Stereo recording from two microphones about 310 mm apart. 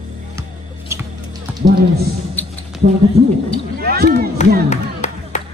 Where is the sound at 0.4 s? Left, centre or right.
Centre.